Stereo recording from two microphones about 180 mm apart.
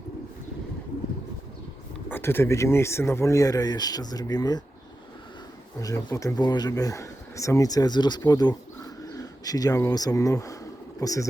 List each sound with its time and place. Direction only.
2.0 s speech: 10° left (ahead or behind)
5.8 s speech: 20° left (ahead or behind)